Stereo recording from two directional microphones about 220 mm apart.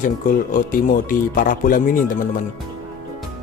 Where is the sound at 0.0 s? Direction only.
40° left (ahead or behind).